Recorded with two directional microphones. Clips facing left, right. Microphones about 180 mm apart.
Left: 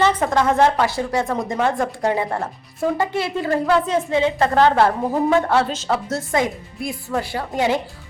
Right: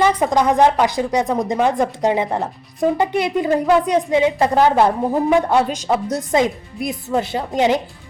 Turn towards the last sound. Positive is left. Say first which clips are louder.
# right 3 dB
turn(degrees=-20)  # may be behind; listen again after turning